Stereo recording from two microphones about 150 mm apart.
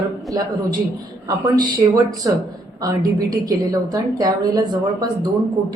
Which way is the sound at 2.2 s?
25° right (ahead or behind).